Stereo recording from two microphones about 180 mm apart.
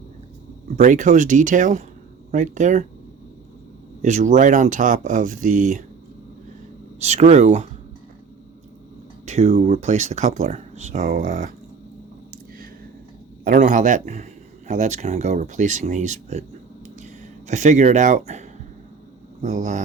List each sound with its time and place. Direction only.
0.8 s speech: 45° right (ahead or behind)
4.0 s speech: 40° right (ahead or behind)
7.0 s speech: 40° right (ahead or behind)
9.2 s a sound: 35° right (ahead or behind)
9.6 s speech: 35° right (ahead or behind)
13.4 s speech: 50° right (ahead or behind)
17.5 s speech: 40° right (ahead or behind)